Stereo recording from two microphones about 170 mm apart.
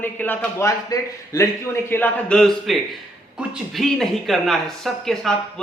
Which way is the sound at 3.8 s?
Centre (ahead or behind).